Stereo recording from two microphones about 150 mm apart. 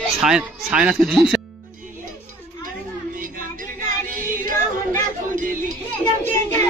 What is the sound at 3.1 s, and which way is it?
Music, 65° right (ahead or behind).